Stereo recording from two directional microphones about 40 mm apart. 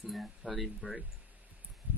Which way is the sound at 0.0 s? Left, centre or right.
Centre.